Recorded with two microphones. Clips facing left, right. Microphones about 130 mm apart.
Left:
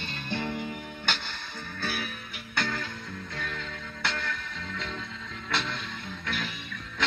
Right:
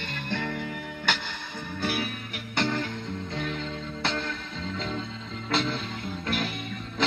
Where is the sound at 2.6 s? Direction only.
25° right (ahead or behind).